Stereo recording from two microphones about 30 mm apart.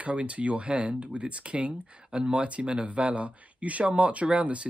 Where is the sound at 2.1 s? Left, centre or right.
Right.